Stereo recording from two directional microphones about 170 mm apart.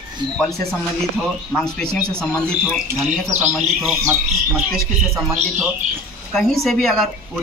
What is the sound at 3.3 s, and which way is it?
Speech, 10° right (ahead or behind).